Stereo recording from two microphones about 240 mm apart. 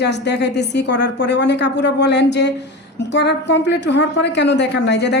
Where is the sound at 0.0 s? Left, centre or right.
Left.